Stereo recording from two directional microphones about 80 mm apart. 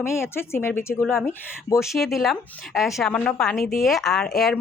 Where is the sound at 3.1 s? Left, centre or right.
Centre.